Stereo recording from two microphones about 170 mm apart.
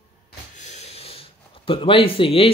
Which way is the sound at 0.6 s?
40° left (ahead or behind).